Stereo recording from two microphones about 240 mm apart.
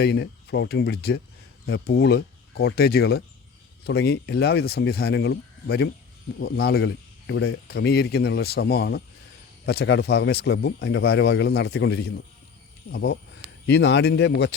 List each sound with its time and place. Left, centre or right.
0.0 s speech: left